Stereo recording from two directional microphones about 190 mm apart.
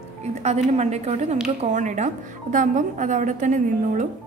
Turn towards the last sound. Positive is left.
turn(degrees=-40)  # may be behind; listen again after turning